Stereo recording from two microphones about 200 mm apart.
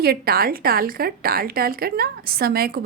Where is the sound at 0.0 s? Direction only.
50° right (ahead or behind).